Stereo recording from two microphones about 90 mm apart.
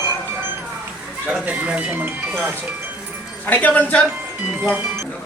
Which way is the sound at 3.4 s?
20° left (ahead or behind).